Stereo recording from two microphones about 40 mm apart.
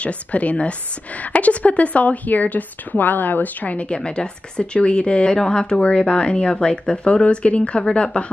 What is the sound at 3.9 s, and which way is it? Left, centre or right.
A woman's voice, left.